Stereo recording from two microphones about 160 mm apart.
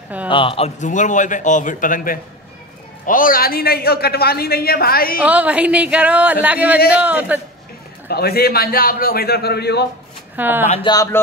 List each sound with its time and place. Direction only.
0.3 s a man's voice: 35° left (ahead or behind); by 5.2 s 70° left (ahead or behind)
5.2 s speech: 10° right (ahead or behind)
8.1 s a man's voice: 75° left (ahead or behind); by 9.8 s 90° left
10.3 s speech: 10° right (ahead or behind)
10.9 s speech: 20° left (ahead or behind)